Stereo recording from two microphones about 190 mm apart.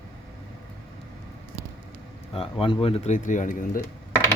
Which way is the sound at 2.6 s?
30° left (ahead or behind).